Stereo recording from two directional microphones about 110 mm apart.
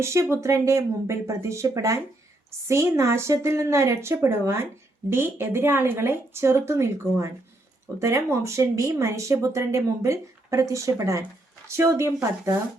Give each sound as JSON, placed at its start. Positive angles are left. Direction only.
{"t": 0.0, "sound": "a woman's voice", "side_deg": -25}